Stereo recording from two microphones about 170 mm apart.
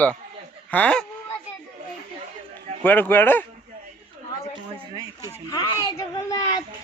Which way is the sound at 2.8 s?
10° left (ahead or behind).